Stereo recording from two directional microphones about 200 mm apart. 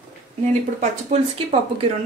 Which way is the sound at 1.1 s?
35° right (ahead or behind).